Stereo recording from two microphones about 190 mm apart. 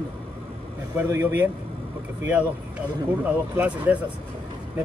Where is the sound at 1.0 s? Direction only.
10° right (ahead or behind).